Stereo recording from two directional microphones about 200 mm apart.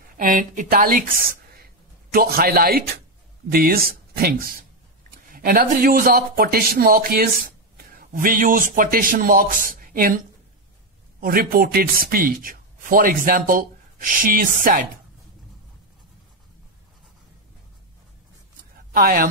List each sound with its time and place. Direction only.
0.2 s speech: 40° right (ahead or behind)
2.1 s speech: 50° right (ahead or behind)
18.9 s speech: 45° right (ahead or behind)